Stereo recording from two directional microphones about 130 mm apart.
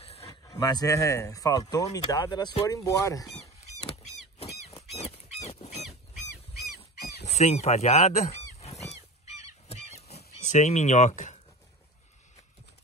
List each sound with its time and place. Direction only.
0.0 s a sound: 50° left (ahead or behind)
0.3 s speech: 30° left (ahead or behind)
4.9 s dog: 55° left (ahead or behind)
6.8 s goose: 55° left (ahead or behind)